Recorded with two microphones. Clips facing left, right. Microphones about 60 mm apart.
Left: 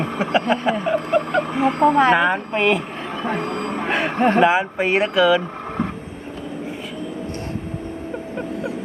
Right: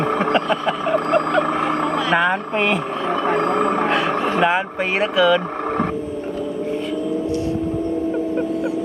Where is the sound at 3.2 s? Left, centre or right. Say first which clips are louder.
Right 5 dB; right.